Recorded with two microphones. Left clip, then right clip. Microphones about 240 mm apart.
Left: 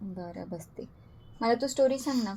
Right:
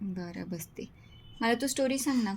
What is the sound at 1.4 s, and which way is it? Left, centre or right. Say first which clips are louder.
Speech: left 2 dB; right.